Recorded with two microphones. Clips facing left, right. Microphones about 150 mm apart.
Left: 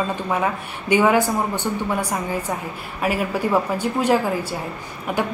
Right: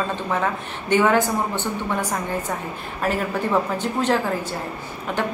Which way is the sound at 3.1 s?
10° left (ahead or behind).